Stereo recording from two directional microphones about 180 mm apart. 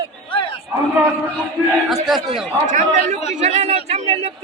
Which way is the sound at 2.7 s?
45° right (ahead or behind).